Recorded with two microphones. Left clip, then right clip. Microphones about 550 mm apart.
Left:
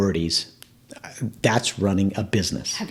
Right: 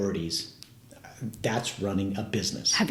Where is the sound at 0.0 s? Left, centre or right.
Left.